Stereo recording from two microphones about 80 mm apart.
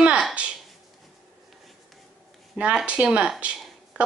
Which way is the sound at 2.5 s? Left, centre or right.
Centre.